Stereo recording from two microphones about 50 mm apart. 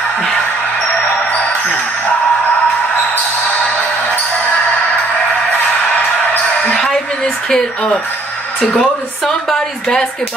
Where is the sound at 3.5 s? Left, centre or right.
Left.